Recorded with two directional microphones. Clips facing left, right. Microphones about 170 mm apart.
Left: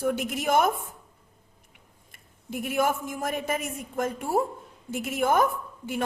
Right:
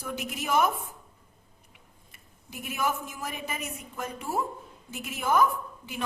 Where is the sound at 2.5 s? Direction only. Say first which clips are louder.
Left 5 dB; 50° left (ahead or behind).